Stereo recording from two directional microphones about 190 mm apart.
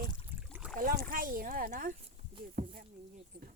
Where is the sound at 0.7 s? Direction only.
50° right (ahead or behind).